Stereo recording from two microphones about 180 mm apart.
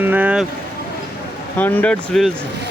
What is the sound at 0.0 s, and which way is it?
Vehicle, 10° right (ahead or behind).